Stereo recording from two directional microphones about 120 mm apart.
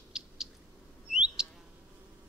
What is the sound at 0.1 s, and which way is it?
Cat, 5° right (ahead or behind).